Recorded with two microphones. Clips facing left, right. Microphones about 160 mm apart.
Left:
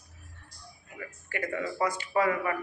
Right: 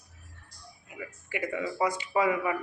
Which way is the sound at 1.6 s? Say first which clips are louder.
Right 1 dB; 15° right (ahead or behind).